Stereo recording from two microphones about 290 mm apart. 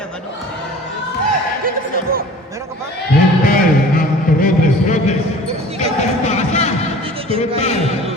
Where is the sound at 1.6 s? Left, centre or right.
Right.